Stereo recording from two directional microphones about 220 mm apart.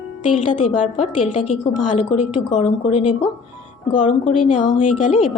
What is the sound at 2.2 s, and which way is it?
Speech, 90° left.